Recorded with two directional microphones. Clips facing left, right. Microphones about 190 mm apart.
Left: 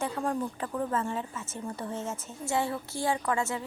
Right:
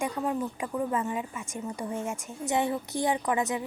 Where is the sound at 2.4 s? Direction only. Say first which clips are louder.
Right 2 dB; 20° right (ahead or behind).